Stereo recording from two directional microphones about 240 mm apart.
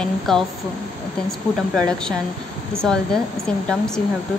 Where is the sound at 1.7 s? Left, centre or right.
Centre.